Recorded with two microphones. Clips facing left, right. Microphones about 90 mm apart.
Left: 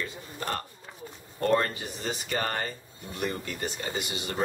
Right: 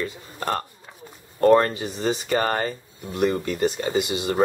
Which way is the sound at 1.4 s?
45° right (ahead or behind).